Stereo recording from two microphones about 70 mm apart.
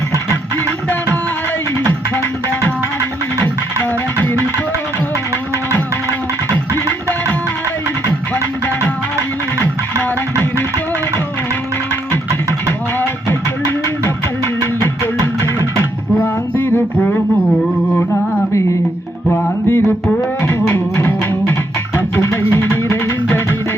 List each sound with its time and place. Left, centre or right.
1.8 s music: left
4.2 s music: left
14.4 s music: left
16.2 s music: left
19.3 s music: left